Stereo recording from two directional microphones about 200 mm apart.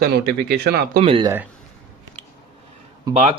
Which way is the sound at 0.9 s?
25° right (ahead or behind).